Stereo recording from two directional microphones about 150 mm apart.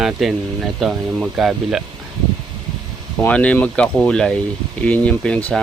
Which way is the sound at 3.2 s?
10° left (ahead or behind).